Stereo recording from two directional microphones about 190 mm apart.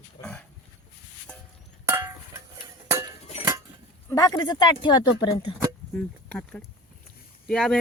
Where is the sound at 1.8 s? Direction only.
10° right (ahead or behind).